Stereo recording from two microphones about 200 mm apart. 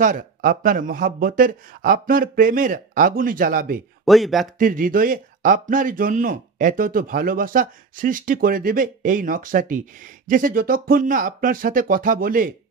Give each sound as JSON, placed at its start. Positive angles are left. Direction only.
{"t": 0.0, "sound": "speech", "side_deg": -40}
{"t": 4.0, "sound": "speech", "side_deg": 0}
{"t": 4.6, "sound": "speech", "side_deg": -45}